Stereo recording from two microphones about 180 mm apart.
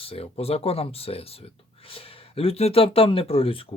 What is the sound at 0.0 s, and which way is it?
Speech, 35° left (ahead or behind).